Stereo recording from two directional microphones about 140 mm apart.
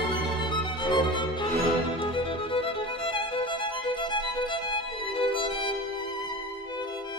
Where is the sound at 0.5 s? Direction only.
35° left (ahead or behind).